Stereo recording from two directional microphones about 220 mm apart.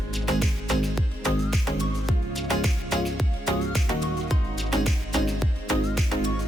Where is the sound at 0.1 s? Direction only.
Centre (ahead or behind).